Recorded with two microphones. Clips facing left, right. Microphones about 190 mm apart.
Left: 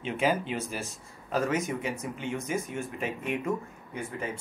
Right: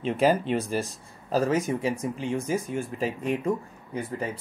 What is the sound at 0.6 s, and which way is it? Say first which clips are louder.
Speech: right 7 dB; 30° right (ahead or behind).